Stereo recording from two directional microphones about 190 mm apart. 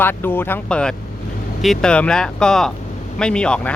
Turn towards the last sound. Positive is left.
turn(degrees=5)  # may be behind; listen again after turning